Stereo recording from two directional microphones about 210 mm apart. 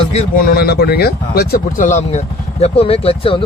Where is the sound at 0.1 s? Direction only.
35° left (ahead or behind).